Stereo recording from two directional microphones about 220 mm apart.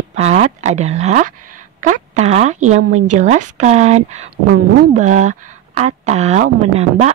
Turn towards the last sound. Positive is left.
turn(degrees=-30)  # may be behind; listen again after turning